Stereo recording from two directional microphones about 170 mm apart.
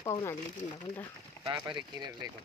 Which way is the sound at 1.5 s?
25° right (ahead or behind).